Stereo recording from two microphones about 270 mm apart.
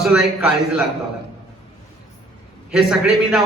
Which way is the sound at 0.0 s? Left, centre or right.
Centre.